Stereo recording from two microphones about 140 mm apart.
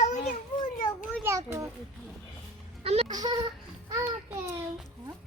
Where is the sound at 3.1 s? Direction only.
30° right (ahead or behind).